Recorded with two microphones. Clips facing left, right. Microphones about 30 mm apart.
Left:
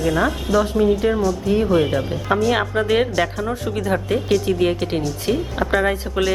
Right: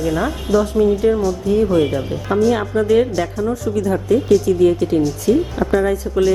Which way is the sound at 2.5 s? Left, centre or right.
Left.